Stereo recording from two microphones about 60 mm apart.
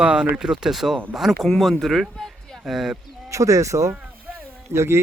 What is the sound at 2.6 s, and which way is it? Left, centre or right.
Speech, centre.